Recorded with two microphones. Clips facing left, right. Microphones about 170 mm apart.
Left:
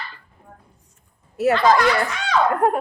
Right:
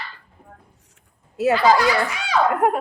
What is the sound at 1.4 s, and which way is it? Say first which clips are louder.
Speech: even; 10° right (ahead or behind).